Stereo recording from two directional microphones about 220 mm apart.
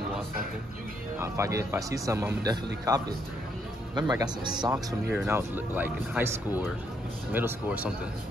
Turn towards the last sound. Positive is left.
turn(degrees=-5)  # may be behind; listen again after turning